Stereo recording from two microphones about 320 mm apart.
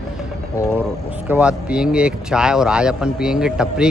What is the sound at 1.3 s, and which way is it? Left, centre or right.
Speech, centre.